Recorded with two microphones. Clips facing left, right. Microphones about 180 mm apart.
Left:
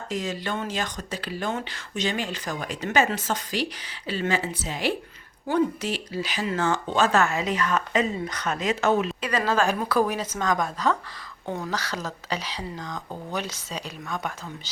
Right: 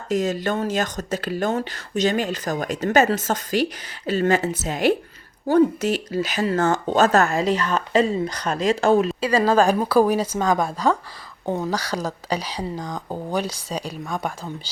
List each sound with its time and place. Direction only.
0.1 s speech: 45° right (ahead or behind)